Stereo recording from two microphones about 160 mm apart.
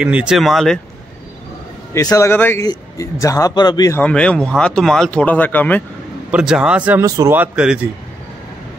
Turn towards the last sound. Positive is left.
turn(degrees=-10)  # may be behind; listen again after turning